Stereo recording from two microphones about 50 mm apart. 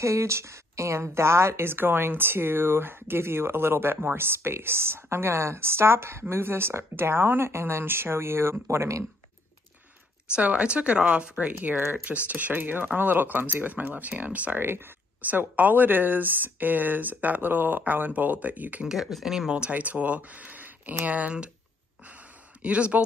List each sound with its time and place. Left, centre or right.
0.0 s a woman's voice: right
10.3 s speech: right
11.8 s speech: right
14.6 s a woman's voice: right
15.2 s speech: right
18.9 s speech: centre
19.5 s speech: right
22.6 s speech: right